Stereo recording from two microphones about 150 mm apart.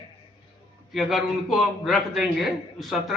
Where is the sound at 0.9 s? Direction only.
Centre (ahead or behind).